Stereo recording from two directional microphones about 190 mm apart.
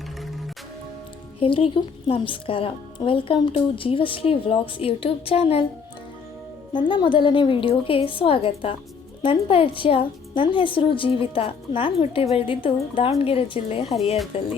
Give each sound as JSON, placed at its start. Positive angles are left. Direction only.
{"t": 1.4, "sound": "a woman's voice", "side_deg": 30}
{"t": 6.7, "sound": "a woman's voice", "side_deg": 25}
{"t": 13.8, "sound": "speech", "side_deg": 0}
{"t": 14.3, "sound": "a woman's voice", "side_deg": 30}